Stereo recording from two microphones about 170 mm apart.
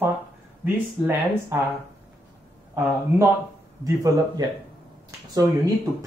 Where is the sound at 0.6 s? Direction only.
15° right (ahead or behind).